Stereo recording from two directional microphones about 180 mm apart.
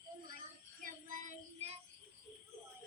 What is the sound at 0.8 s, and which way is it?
Child singing, 45° right (ahead or behind).